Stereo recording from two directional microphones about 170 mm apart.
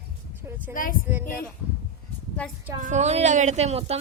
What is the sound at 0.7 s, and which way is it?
Speech, 55° left (ahead or behind).